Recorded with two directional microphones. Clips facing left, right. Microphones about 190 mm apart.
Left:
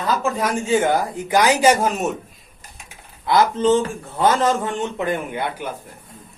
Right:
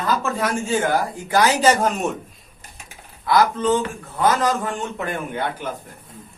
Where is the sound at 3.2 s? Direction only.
25° left (ahead or behind).